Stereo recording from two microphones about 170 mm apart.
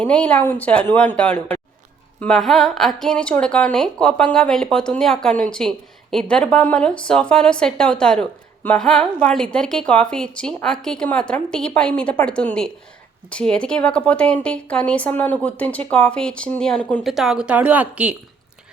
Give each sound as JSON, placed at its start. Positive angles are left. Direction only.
{"t": 0.0, "sound": "speech", "side_deg": 5}